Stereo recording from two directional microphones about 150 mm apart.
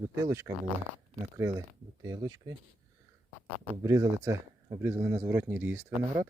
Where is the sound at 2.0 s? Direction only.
25° right (ahead or behind).